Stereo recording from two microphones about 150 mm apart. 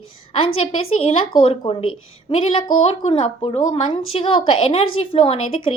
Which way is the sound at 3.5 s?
40° left (ahead or behind).